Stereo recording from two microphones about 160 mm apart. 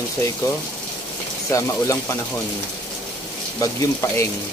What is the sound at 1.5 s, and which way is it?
Speech, 20° left (ahead or behind).